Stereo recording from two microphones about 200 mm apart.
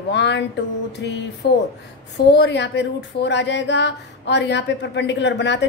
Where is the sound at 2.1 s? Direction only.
60° left (ahead or behind).